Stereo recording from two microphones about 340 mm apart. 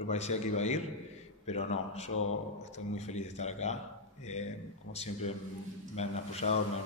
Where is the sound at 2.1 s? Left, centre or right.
Left.